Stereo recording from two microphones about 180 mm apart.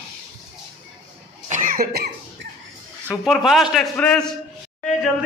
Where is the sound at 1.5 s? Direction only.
45° right (ahead or behind).